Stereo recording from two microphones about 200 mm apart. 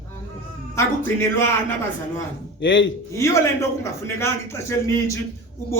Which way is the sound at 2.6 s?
70° left (ahead or behind).